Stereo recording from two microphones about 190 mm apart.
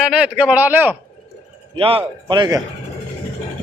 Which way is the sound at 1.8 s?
30° right (ahead or behind).